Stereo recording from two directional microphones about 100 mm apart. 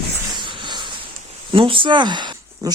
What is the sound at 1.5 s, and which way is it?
Speech, 60° right (ahead or behind).